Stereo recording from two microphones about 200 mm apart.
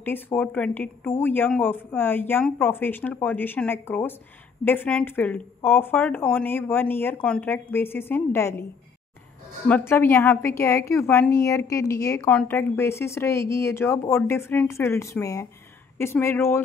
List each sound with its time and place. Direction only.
0.0 s speech: 10° left (ahead or behind)
9.7 s speech: 10° left (ahead or behind)